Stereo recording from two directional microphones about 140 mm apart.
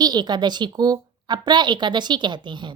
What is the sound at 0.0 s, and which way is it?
A woman's voice, 30° right (ahead or behind).